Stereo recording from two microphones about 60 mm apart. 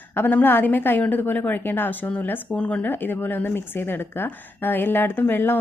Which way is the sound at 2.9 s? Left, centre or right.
Left.